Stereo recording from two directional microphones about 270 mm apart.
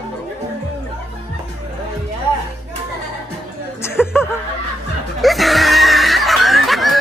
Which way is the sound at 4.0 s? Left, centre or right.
Centre.